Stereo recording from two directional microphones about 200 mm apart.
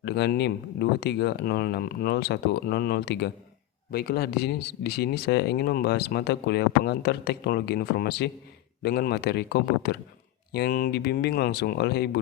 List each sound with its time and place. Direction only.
0.0 s speech: 55° left (ahead or behind)